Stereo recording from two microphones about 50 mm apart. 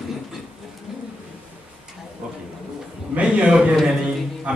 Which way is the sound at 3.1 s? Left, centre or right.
Right.